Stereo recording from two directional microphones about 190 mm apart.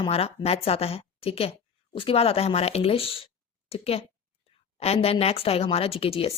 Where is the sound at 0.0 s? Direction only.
30° left (ahead or behind).